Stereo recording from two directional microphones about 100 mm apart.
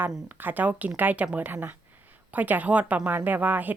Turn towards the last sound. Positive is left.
turn(degrees=-15)  # may be behind; listen again after turning